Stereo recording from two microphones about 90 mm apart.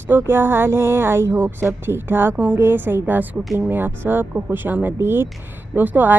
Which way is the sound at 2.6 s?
25° right (ahead or behind).